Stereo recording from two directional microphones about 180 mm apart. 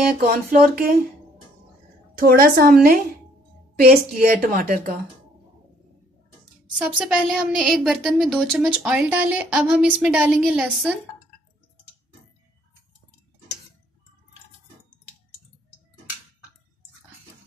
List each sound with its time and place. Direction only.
0.0 s a woman's voice: 55° right (ahead or behind)
2.1 s a woman's voice: 55° right (ahead or behind)
6.8 s a woman's voice: 5° right (ahead or behind)